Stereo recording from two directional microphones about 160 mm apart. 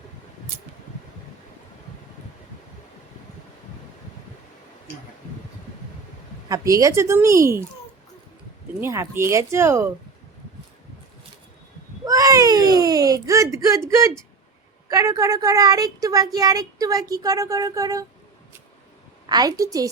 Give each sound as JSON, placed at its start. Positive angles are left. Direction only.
{"t": 6.5, "sound": "speech", "side_deg": -20}
{"t": 8.8, "sound": "speech", "side_deg": -15}
{"t": 12.0, "sound": "a sound", "side_deg": -20}
{"t": 14.8, "sound": "speech", "side_deg": -20}
{"t": 19.3, "sound": "speech", "side_deg": -25}